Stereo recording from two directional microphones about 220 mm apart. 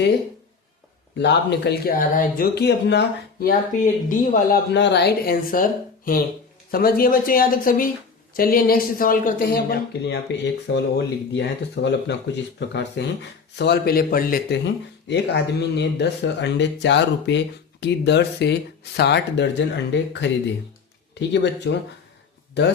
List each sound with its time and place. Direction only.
1.2 s speech: 50° left (ahead or behind)
3.4 s speech: 35° left (ahead or behind)
4.7 s speech: 50° left (ahead or behind)
6.7 s speech: 40° left (ahead or behind)